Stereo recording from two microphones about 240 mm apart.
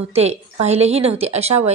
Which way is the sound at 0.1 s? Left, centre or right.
Right.